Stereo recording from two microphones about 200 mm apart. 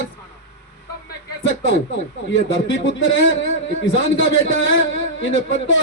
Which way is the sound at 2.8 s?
70° left (ahead or behind).